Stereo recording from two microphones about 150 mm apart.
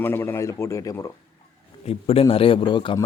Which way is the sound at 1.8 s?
40° left (ahead or behind).